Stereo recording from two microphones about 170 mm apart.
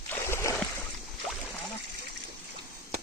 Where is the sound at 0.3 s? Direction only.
15° left (ahead or behind).